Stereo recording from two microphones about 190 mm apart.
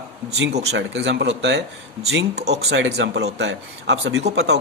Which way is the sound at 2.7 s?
65° right (ahead or behind).